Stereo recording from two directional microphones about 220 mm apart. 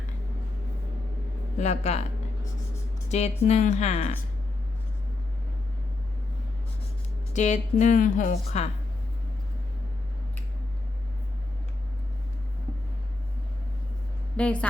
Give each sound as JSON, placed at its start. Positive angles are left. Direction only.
{"t": 1.5, "sound": "speech", "side_deg": 30}
{"t": 3.1, "sound": "a woman's voice", "side_deg": 30}
{"t": 7.3, "sound": "a woman's voice", "side_deg": 35}
{"t": 14.3, "sound": "a woman's voice", "side_deg": 5}